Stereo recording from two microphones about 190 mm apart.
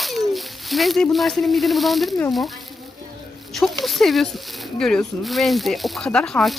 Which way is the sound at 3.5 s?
Centre (ahead or behind).